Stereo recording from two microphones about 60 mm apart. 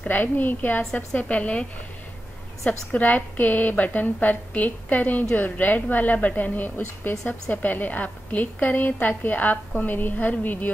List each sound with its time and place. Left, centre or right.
0.1 s a woman's voice: left
2.9 s a woman's voice: left